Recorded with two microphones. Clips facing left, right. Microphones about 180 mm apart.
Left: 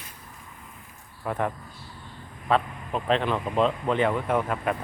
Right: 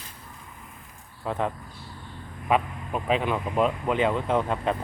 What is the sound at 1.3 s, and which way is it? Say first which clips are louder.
Speech: even; 20° right (ahead or behind).